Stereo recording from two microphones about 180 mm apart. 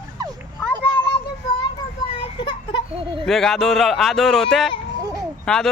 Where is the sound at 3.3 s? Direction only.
Centre (ahead or behind).